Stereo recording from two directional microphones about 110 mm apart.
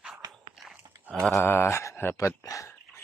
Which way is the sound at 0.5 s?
Centre (ahead or behind).